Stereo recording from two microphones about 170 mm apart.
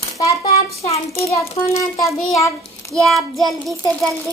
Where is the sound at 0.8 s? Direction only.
35° left (ahead or behind).